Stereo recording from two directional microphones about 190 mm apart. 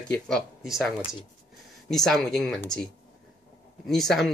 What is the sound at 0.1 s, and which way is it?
Speech, centre (ahead or behind).